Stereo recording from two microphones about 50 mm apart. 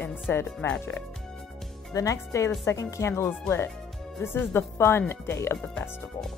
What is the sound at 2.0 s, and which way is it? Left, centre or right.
Speech, left.